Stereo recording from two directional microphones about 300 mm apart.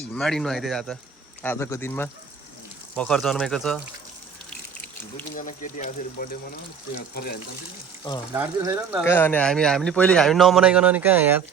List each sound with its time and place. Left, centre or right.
0.1 s a man's voice: centre
5.3 s speech: left
8.3 s speech: centre
9.0 s a man's voice: centre